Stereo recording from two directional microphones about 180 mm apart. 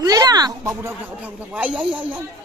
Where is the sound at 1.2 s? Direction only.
5° right (ahead or behind).